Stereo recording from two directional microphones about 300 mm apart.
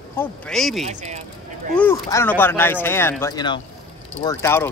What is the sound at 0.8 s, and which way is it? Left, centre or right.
Speech, right.